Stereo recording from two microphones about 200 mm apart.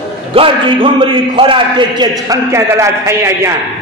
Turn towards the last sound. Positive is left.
turn(degrees=-15)  # may be behind; listen again after turning